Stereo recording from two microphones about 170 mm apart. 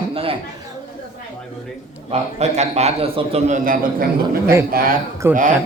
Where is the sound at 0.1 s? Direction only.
35° right (ahead or behind).